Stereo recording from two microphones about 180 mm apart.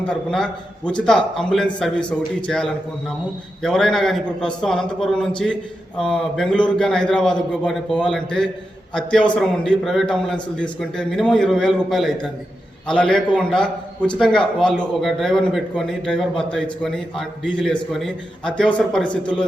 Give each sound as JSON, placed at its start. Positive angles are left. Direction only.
{"t": 0.1, "sound": "a man's voice", "side_deg": 5}